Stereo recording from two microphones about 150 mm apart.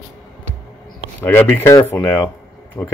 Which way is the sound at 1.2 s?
15° left (ahead or behind).